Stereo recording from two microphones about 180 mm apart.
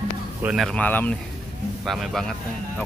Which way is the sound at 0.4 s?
5° right (ahead or behind).